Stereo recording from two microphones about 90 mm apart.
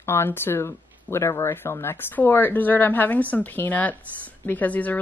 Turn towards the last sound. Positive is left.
turn(degrees=20)  # may be behind; listen again after turning